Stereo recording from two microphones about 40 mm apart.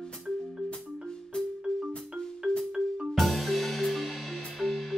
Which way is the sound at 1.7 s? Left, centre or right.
Left.